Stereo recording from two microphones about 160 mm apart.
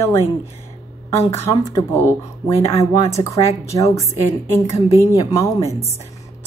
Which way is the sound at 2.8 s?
20° left (ahead or behind).